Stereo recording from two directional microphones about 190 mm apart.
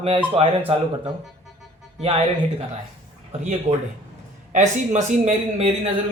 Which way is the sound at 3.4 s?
35° right (ahead or behind).